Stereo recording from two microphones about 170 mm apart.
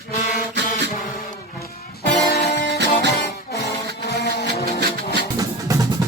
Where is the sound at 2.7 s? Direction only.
80° right.